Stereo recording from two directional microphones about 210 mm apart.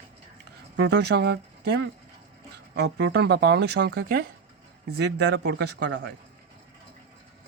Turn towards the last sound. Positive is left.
turn(degrees=-55)  # may be behind; listen again after turning